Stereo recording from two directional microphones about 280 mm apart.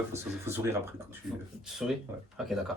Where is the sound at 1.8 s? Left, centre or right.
Centre.